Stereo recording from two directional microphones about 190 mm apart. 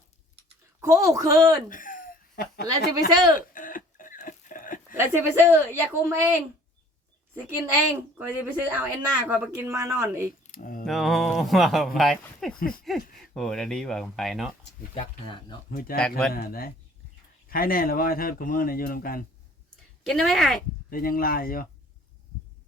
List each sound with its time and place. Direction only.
0.8 s speech: 15° right (ahead or behind)
1.7 s a sound: 45° left (ahead or behind)
4.9 s speech: 10° right (ahead or behind)
8.2 s speech: 10° right (ahead or behind)
10.4 s a sound: 45° left (ahead or behind)
10.8 s speech: centre (ahead or behind)
12.5 s speech: 50° left (ahead or behind)
13.3 s speech: 5° left (ahead or behind)
14.9 s speech: 25° left (ahead or behind)
15.7 s speech: 50° left (ahead or behind)
16.0 s speech: 5° left (ahead or behind)
16.3 s speech: 50° left (ahead or behind)
20.1 s speech: centre (ahead or behind)
20.9 s speech: 50° left (ahead or behind)